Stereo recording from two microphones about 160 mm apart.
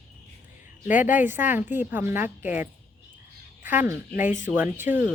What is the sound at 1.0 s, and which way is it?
A woman's voice, 10° right (ahead or behind).